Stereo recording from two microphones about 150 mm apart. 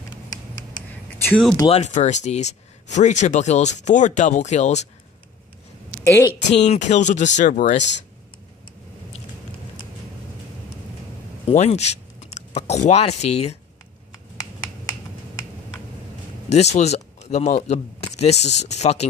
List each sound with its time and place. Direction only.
1.7 s speech: 50° left (ahead or behind)
6.0 s a woman's voice: 15° left (ahead or behind)
6.5 s speech: 50° left (ahead or behind)
11.4 s speech: 45° left (ahead or behind)
16.4 s speech: 45° left (ahead or behind)